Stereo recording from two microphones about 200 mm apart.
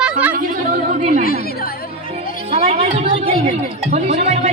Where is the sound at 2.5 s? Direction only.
30° right (ahead or behind).